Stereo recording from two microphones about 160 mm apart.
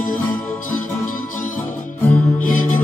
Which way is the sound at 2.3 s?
55° left (ahead or behind).